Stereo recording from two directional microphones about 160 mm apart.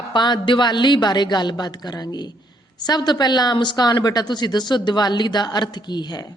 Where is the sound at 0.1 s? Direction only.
30° left (ahead or behind).